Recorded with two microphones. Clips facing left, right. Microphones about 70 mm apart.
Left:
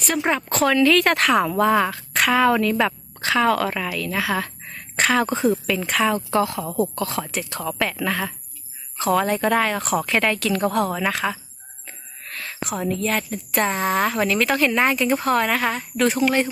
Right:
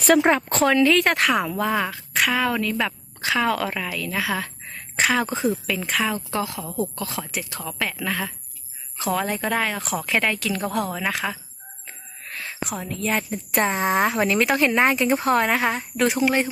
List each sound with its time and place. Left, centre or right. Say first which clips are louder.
0.2 s speech: right 2 dB; right
0.9 s a woman's voice: left 2 dB; centre
11.9 s owl: left 1 dB; centre
12.6 s a woman's voice: left 4 dB; centre
13.7 s speech: right 1 dB; right
16.0 s speech: left 1 dB; centre